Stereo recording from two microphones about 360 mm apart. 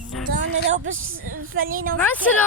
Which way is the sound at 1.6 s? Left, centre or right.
Right.